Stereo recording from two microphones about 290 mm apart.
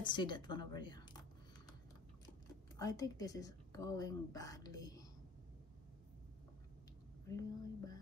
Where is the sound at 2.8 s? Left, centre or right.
Centre.